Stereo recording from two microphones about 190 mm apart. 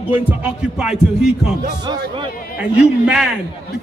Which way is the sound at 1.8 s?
20° right (ahead or behind).